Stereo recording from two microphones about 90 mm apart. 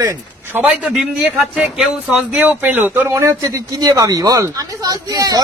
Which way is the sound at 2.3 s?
20° right (ahead or behind).